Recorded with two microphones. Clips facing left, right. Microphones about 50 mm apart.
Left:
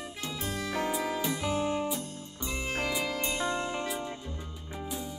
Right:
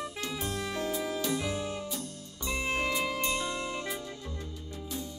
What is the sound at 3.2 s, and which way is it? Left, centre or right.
Music, left.